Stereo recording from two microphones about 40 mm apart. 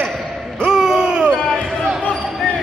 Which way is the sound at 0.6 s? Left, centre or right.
Centre.